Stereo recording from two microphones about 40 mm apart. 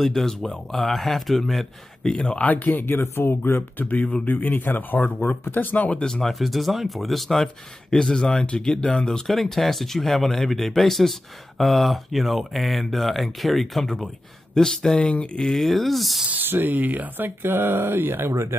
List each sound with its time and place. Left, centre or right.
0.0 s speech: centre
2.0 s speech: centre
2.4 s speech: left
2.8 s speech: left
3.7 s speech: left
6.2 s speech: centre
7.9 s speech: centre
9.3 s speech: centre
15.0 s speech: left
15.5 s speech: centre
16.4 s speech: right
16.7 s speech: right
17.4 s speech: right